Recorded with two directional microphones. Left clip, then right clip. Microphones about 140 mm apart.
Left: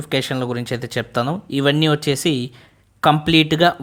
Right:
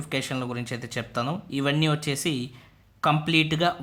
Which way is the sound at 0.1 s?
40° left (ahead or behind).